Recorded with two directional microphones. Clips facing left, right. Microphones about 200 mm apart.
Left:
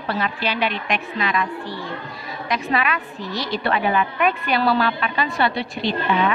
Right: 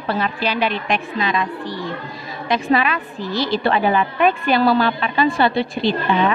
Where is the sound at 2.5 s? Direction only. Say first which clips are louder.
Right 5 dB; 30° right (ahead or behind).